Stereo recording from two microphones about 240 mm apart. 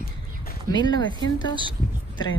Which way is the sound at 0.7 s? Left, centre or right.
Centre.